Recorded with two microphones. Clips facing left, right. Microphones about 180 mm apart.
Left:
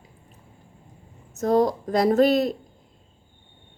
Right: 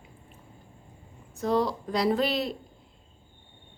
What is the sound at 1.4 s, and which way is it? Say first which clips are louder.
Speech: left 6 dB; 45° left (ahead or behind).